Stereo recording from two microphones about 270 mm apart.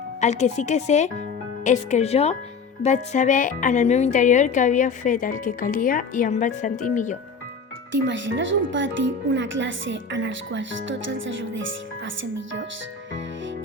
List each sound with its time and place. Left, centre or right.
0.2 s a woman's voice: left
7.9 s speech: right